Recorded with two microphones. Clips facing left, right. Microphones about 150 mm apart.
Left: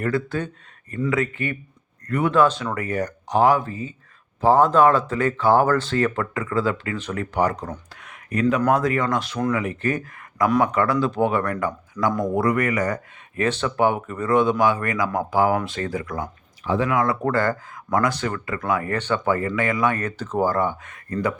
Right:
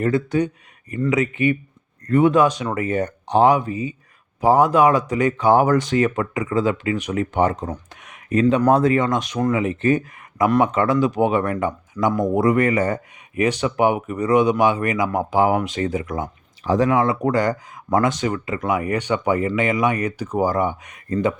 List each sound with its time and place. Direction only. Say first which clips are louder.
0.0 s speech: right 5 dB; 20° right (ahead or behind)
2.3 s speech: right 1 dB; 15° right (ahead or behind)
13.3 s speech: right 3 dB; 15° right (ahead or behind)
16.6 s speech: right 3 dB; 40° right (ahead or behind)
17.2 s speech: right 2 dB; 15° right (ahead or behind)